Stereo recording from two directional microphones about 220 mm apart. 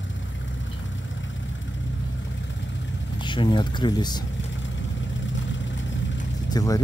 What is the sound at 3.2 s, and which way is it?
Speech, 20° left (ahead or behind).